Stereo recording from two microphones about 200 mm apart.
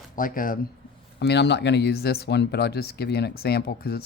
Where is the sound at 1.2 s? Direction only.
60° left (ahead or behind).